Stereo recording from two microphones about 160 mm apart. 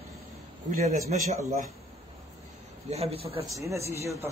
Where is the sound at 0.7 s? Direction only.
50° right (ahead or behind).